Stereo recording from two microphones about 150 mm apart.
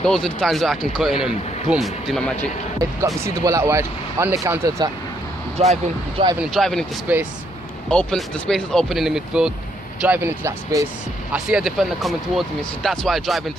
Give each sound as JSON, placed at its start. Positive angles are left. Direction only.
{"t": 0.0, "sound": "speech", "side_deg": 5}
{"t": 3.2, "sound": "speech", "side_deg": -20}
{"t": 5.6, "sound": "speech", "side_deg": -45}
{"t": 6.4, "sound": "speech", "side_deg": 0}
{"t": 7.1, "sound": "speech", "side_deg": -10}
{"t": 7.9, "sound": "speech", "side_deg": 5}
{"t": 10.0, "sound": "speech", "side_deg": -15}
{"t": 11.3, "sound": "speech", "side_deg": -5}